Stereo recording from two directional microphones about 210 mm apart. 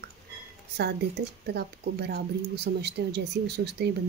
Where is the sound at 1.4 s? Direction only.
50° right (ahead or behind).